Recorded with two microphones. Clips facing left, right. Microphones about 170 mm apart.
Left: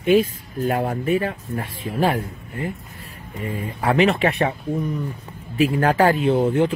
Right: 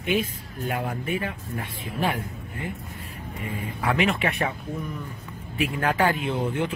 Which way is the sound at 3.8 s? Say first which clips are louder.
Left 6 dB; 35° left (ahead or behind).